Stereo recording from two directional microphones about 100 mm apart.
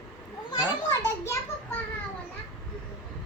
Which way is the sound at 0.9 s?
30° left (ahead or behind).